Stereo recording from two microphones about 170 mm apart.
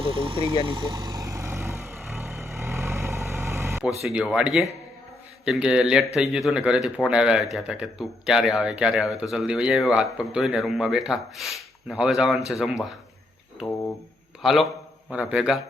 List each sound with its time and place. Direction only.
0.0 s speech: 30° right (ahead or behind)
0.6 s vehicle: 25° right (ahead or behind)
4.0 s speech: 5° right (ahead or behind)
14.4 s speech: centre (ahead or behind)